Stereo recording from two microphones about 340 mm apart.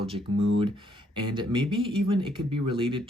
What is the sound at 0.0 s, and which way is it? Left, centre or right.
Speech, centre.